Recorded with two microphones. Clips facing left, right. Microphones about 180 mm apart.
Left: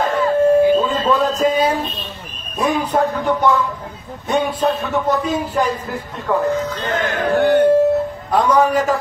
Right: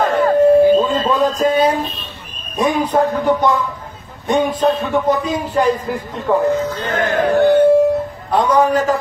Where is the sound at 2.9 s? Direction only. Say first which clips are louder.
Right 2 dB; 10° right (ahead or behind).